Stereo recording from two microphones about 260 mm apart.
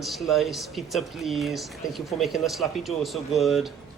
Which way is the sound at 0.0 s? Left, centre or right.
Centre.